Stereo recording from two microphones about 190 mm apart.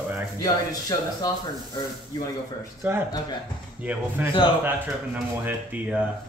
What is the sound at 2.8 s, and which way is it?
Speech, 10° right (ahead or behind).